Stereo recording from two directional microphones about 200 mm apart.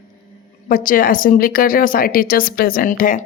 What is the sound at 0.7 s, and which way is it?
Speech, 45° left (ahead or behind).